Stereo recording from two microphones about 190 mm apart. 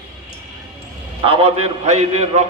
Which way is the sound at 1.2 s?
30° right (ahead or behind).